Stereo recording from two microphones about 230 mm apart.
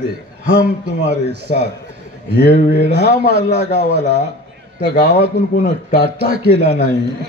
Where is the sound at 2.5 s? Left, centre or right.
Left.